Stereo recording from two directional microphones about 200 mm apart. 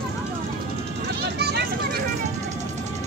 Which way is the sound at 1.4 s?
55° right (ahead or behind).